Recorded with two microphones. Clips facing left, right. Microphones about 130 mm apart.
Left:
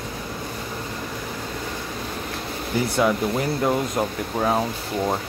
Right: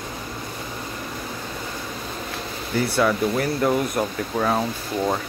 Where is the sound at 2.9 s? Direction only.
20° left (ahead or behind).